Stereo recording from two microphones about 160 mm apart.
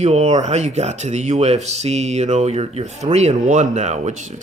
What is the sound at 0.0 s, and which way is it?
Speech, 45° right (ahead or behind).